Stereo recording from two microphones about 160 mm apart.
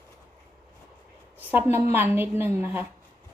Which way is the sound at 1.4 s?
10° right (ahead or behind).